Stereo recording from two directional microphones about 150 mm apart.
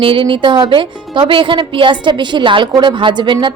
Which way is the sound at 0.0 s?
35° right (ahead or behind).